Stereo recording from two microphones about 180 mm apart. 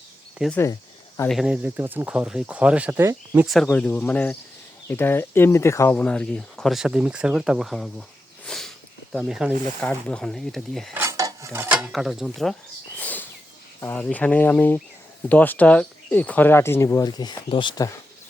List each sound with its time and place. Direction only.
0.5 s cricket: 15° left (ahead or behind)
1.3 s speech: 5° right (ahead or behind)
3.4 s speech: centre (ahead or behind)
8.4 s sniff: centre (ahead or behind)
9.1 s speech: 5° right (ahead or behind)
10.9 s a sound: 15° right (ahead or behind); by 13.2 s 10° left (ahead or behind)
13.8 s speech: 10° left (ahead or behind); by 17.9 s 25° left (ahead or behind)